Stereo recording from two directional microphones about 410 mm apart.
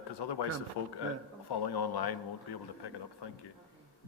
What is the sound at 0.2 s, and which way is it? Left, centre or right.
Speech, left.